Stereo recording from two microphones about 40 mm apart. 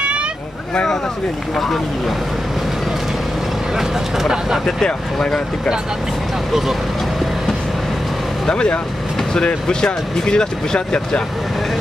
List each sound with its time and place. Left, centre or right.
3.7 s speech: centre
4.8 s speech: centre
8.5 s speech: left